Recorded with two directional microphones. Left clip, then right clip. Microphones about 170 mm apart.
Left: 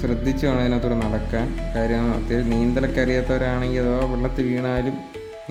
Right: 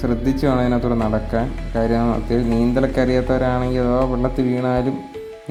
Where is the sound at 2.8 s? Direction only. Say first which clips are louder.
Right 4 dB; 5° right (ahead or behind).